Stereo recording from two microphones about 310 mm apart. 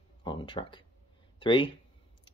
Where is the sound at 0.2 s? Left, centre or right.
Centre.